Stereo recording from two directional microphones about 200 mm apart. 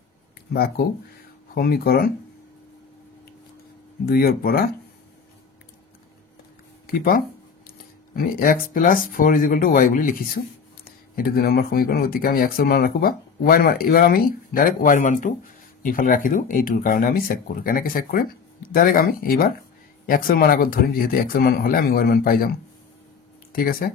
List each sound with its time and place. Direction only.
0.5 s speech: 50° left (ahead or behind)
4.0 s speech: 50° left (ahead or behind)
6.9 s speech: 45° left (ahead or behind)
23.5 s speech: 45° left (ahead or behind)